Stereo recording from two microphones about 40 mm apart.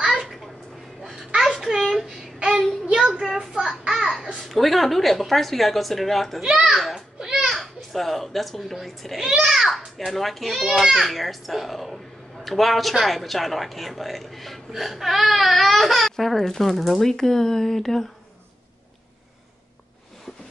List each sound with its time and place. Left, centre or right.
0.1 s a sound: centre
2.0 s child singing: right
3.2 s a sound: centre
4.5 s a woman's voice: centre
6.7 s children playing: centre
7.2 s children playing: centre
7.4 s a child's voice: centre
9.4 s a child's voice: centre